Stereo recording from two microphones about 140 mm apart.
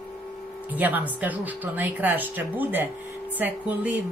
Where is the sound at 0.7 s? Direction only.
10° right (ahead or behind).